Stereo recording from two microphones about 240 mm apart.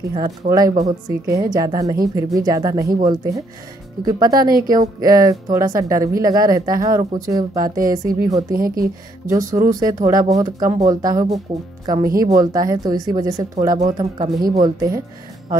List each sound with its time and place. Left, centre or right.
0.1 s speech: centre
0.7 s a woman's voice: right
1.3 s speech: centre
8.5 s speech: right
9.3 s a woman's voice: centre